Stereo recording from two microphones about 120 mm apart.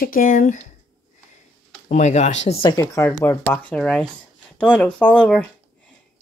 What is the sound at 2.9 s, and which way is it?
Speech, 25° left (ahead or behind).